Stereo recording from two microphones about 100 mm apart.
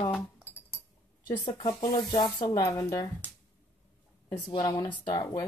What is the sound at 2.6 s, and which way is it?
Speech, 35° left (ahead or behind).